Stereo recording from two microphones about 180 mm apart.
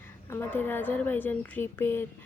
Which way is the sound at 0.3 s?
10° left (ahead or behind).